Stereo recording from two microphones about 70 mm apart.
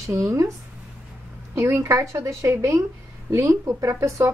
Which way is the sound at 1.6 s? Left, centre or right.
Right.